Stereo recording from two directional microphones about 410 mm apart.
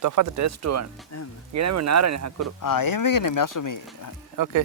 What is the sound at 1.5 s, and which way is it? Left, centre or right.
Speech, right.